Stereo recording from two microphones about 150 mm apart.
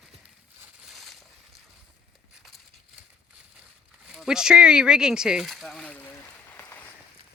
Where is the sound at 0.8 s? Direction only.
Centre (ahead or behind).